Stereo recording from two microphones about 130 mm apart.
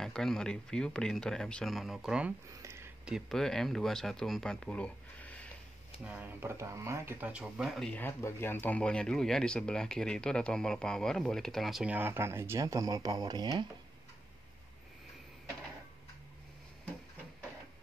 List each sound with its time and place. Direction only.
0.0 s speech: 5° left (ahead or behind)
2.5 s a sound: 20° right (ahead or behind)
3.1 s speech: centre (ahead or behind)
6.0 s speech: 10° right (ahead or behind)
7.9 s speech: 20° left (ahead or behind); by 13.7 s 30° right (ahead or behind)